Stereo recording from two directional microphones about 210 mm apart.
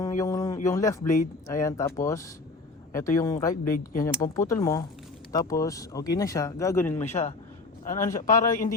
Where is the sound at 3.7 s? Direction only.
40° left (ahead or behind).